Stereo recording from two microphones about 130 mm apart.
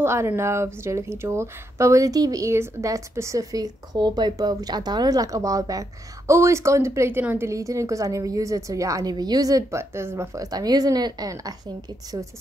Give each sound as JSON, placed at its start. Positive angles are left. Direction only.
{"t": 0.0, "sound": "speech", "side_deg": -20}